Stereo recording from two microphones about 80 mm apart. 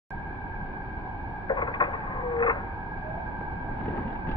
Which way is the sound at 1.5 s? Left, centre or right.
Left.